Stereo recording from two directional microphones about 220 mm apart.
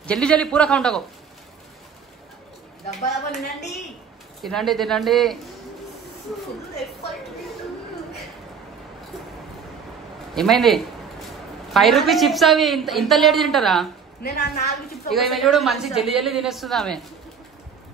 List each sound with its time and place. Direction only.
0.0 s a woman's voice: 5° left (ahead or behind)
4.4 s a woman's voice: centre (ahead or behind)
10.3 s a sound: centre (ahead or behind)
11.7 s a woman's voice: centre (ahead or behind)
14.2 s a woman's voice: 45° left (ahead or behind)
15.0 s a woman's voice: centre (ahead or behind)